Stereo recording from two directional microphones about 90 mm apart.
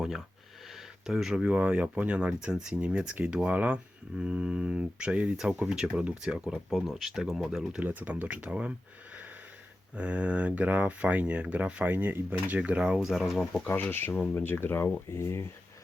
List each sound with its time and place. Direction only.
1.0 s speech: 5° right (ahead or behind)
6.5 s speech: centre (ahead or behind)
7.8 s speech: 20° right (ahead or behind)
9.9 s speech: 15° right (ahead or behind)
13.7 s speech: 25° left (ahead or behind)